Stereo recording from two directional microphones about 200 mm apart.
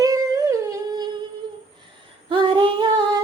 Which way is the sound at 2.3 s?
25° right (ahead or behind).